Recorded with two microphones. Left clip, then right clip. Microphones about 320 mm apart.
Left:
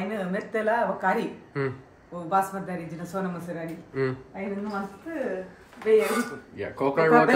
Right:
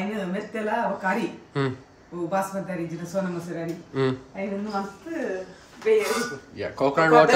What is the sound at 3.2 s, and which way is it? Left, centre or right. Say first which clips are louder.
A man's voice: right 3 dB; centre.